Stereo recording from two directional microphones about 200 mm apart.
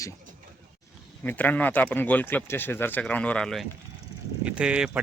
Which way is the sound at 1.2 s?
10° left (ahead or behind).